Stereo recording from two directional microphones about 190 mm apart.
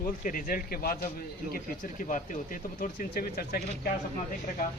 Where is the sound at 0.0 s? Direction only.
45° left (ahead or behind).